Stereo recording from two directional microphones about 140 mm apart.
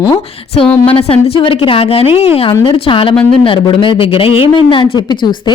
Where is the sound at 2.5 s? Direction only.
30° left (ahead or behind).